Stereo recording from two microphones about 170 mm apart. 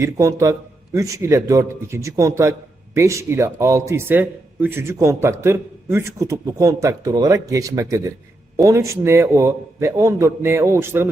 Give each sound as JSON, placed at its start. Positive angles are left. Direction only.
{"t": 0.0, "sound": "a man's voice", "side_deg": -15}